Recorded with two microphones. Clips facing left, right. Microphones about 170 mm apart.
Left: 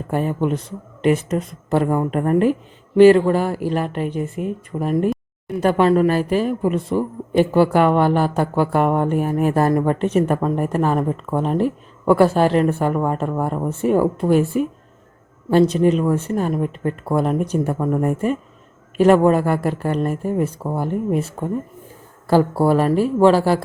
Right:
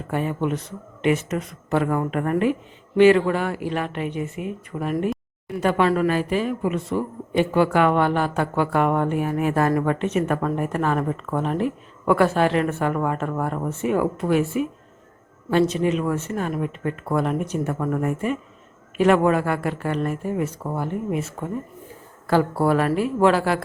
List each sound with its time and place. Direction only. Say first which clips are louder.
0.1 s speech: left 3 dB; 40° left (ahead or behind)
13.2 s speech: left 3 dB; 20° left (ahead or behind)
13.7 s speech: left 5 dB; 35° left (ahead or behind)
17.7 s speech: left 4 dB; 20° left (ahead or behind)
18.0 s speech: left 4 dB; 40° left (ahead or behind)